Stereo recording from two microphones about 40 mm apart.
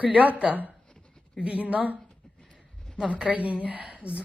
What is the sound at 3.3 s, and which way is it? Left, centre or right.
Speech, right.